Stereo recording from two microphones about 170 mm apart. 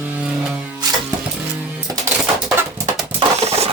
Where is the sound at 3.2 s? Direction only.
35° right (ahead or behind).